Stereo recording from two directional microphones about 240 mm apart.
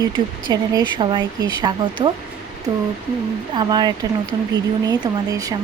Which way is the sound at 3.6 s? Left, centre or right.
Centre.